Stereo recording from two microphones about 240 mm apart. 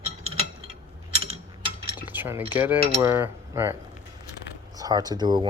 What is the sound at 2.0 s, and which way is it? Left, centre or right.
Cutlery, centre.